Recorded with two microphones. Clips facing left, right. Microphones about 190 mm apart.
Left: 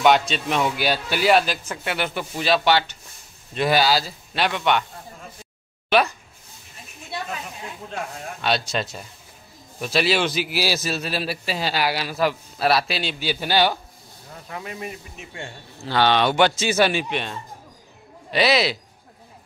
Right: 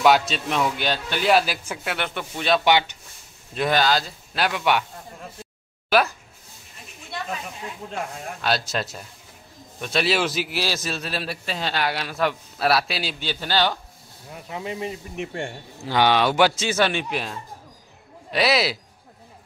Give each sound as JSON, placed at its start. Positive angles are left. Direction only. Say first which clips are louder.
{"t": 0.0, "sound": "a man's voice", "louder": "even", "side_deg": 0}
{"t": 1.4, "sound": "speech", "louder": "left 1 dB", "side_deg": -10}
{"t": 2.0, "sound": "a man's voice", "louder": "left 2 dB", "side_deg": 5}
{"t": 2.6, "sound": "speech", "louder": "even", "side_deg": -15}
{"t": 3.5, "sound": "a man's voice", "louder": "left 1 dB", "side_deg": 5}
{"t": 5.9, "sound": "speech", "louder": "left 1 dB", "side_deg": 0}
{"t": 7.9, "sound": "a man's voice", "louder": "even", "side_deg": 0}
{"t": 13.3, "sound": "a man's voice", "louder": "left 3 dB", "side_deg": 10}
{"t": 14.3, "sound": "speech", "louder": "right 3 dB", "side_deg": -20}
{"t": 15.1, "sound": "speech", "louder": "right 7 dB", "side_deg": -60}
{"t": 15.8, "sound": "a man's voice", "louder": "even", "side_deg": -15}
{"t": 16.6, "sound": "a man's voice", "louder": "left 2 dB", "side_deg": 10}